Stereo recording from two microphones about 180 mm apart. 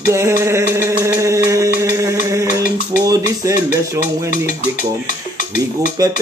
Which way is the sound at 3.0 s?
20° right (ahead or behind).